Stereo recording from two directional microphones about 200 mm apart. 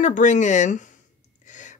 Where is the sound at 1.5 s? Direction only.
40° left (ahead or behind).